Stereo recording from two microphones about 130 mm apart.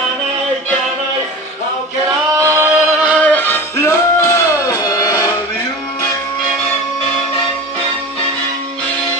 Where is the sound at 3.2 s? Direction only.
10° left (ahead or behind).